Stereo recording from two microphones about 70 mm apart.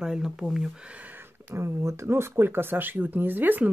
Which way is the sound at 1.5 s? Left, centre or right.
Right.